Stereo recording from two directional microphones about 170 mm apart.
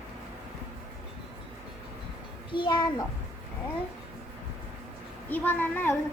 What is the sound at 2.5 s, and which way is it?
Speech, 30° left (ahead or behind).